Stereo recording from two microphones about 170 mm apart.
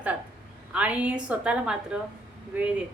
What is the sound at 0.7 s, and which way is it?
A woman's voice, 5° right (ahead or behind).